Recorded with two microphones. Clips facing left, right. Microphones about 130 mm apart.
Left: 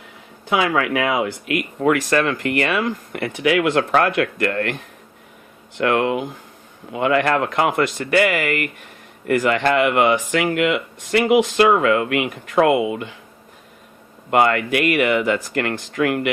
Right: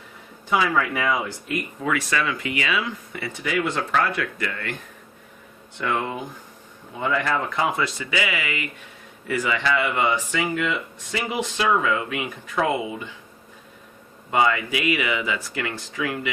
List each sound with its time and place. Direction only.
0.5 s speech: 80° left
14.3 s speech: 65° left (ahead or behind)